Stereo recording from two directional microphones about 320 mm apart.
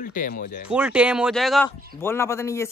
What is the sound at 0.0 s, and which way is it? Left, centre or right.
Speech, left.